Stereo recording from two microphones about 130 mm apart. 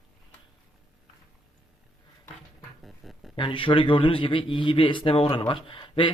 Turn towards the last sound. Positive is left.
turn(degrees=40)  # may be behind; listen again after turning